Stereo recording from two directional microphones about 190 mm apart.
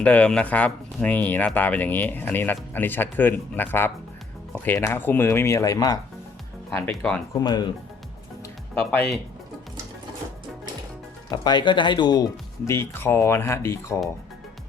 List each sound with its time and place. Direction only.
0.0 s speech: 5° left (ahead or behind)
6.7 s speech: 5° left (ahead or behind)
7.3 s speech: 20° left (ahead or behind)
8.7 s speech: 5° left (ahead or behind)
11.3 s speech: 20° left (ahead or behind)